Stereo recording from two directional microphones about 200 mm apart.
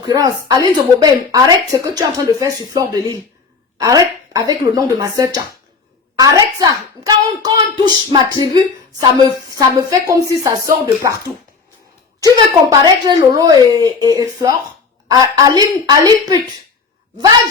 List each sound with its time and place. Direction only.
0.0 s speech: 20° right (ahead or behind)
12.7 s speech: 20° right (ahead or behind)